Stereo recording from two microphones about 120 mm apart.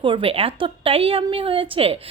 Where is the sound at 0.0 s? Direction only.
45° right (ahead or behind).